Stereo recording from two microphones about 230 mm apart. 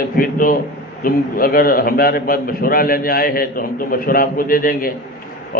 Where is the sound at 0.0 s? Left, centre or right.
Left.